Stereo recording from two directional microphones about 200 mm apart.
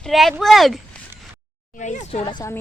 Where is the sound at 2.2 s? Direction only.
20° left (ahead or behind).